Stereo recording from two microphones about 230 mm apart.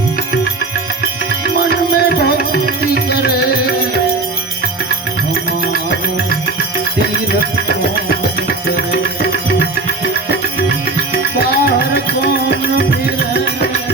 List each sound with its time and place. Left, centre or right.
1.5 s music: left
11.3 s music: left